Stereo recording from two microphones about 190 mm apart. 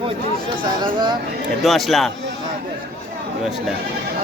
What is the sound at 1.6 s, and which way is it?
Speech, centre (ahead or behind).